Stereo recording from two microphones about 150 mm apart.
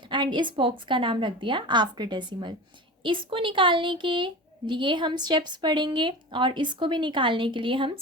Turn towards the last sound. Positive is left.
turn(degrees=-35)  # may be behind; listen again after turning